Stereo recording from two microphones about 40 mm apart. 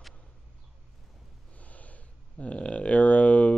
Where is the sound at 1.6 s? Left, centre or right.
Left.